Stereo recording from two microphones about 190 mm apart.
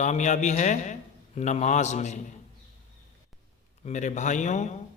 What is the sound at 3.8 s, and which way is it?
Speech, 40° left (ahead or behind).